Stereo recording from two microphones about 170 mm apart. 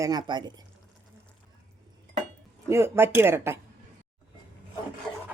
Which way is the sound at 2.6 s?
15° right (ahead or behind).